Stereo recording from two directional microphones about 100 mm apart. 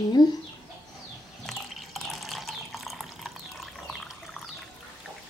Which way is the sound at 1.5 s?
Centre (ahead or behind).